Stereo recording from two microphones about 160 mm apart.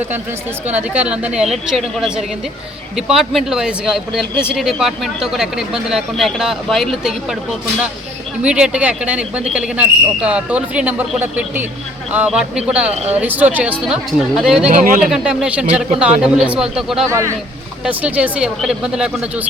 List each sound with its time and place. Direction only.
0.7 s speech: 10° right (ahead or behind)
8.4 s speech: 5° right (ahead or behind)
12.9 s speech: 40° right (ahead or behind)
13.1 s speech: 10° right (ahead or behind)
14.8 s speech: 55° right (ahead or behind)
15.1 s speech: 5° right (ahead or behind)
17.1 s speech: 20° right (ahead or behind)
17.8 s speech: 10° right (ahead or behind)